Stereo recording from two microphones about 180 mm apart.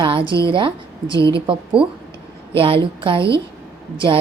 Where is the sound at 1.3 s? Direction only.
30° right (ahead or behind).